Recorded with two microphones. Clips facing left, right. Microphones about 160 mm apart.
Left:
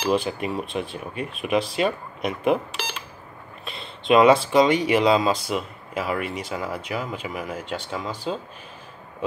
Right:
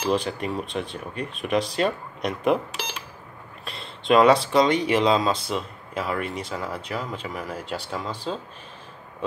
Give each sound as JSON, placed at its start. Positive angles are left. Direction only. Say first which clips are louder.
{"t": 0.1, "sound": "speech", "louder": "left 1 dB", "side_deg": 5}
{"t": 3.6, "sound": "speech", "louder": "even", "side_deg": 0}
{"t": 7.6, "sound": "speech", "louder": "left 1 dB", "side_deg": -35}
{"t": 8.3, "sound": "speech", "louder": "left 2 dB", "side_deg": 10}